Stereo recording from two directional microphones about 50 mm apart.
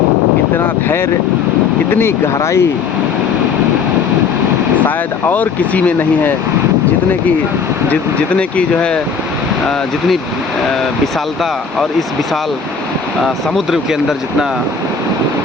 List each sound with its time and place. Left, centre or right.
1.9 s speech: left
5.3 s speech: left
8.4 s speech: left